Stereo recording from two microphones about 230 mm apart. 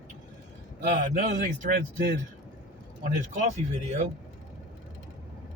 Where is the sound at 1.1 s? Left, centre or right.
Right.